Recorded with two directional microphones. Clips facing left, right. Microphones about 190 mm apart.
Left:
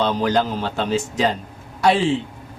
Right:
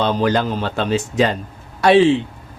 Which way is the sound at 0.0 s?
65° right (ahead or behind).